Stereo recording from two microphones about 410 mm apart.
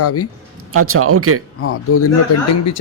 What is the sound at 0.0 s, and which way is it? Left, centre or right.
Speech, left.